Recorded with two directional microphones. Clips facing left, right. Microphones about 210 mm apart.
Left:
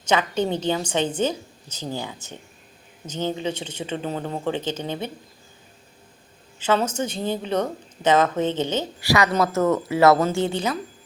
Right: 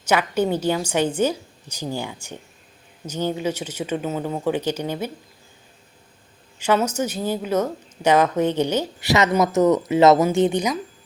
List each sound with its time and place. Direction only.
0.1 s a woman's voice: 10° right (ahead or behind)
6.9 s a woman's voice: 10° right (ahead or behind)